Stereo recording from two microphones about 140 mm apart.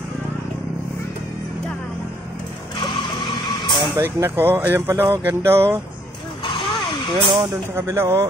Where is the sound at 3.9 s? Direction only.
15° right (ahead or behind).